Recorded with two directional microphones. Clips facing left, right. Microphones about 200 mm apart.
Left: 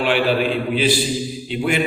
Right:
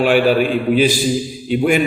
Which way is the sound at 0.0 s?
45° right (ahead or behind).